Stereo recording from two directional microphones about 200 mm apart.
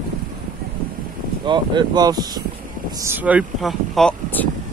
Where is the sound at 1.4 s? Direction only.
20° right (ahead or behind).